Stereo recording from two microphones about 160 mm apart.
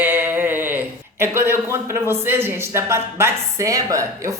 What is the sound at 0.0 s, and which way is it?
Speech, 10° right (ahead or behind).